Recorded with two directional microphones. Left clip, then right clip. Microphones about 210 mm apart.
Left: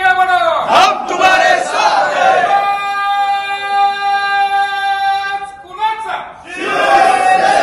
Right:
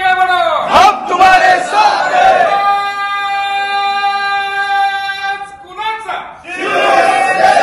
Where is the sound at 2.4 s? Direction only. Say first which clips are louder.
Right 1 dB; 10° right (ahead or behind).